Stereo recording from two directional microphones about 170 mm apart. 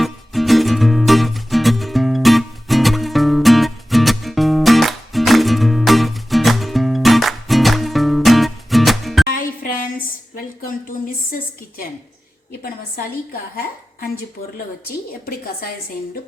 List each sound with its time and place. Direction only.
0.0 s music: centre (ahead or behind)
9.2 s music: 55° left (ahead or behind)
10.3 s a sound: 55° left (ahead or behind)